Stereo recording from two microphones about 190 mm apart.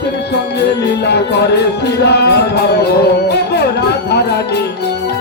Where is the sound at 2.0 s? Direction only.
60° left (ahead or behind).